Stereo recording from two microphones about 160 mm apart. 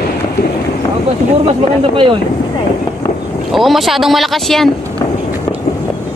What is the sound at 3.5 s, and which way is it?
Speech, centre (ahead or behind).